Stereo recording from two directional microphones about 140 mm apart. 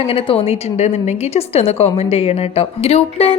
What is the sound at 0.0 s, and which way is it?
A woman's voice, 40° left (ahead or behind).